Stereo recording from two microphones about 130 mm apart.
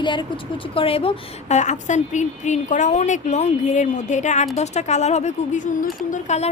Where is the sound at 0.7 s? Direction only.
45° left (ahead or behind); by 5.8 s 75° left (ahead or behind).